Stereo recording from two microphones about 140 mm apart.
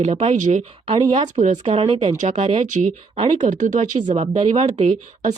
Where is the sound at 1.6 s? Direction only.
45° right (ahead or behind); by 4.0 s 65° right (ahead or behind).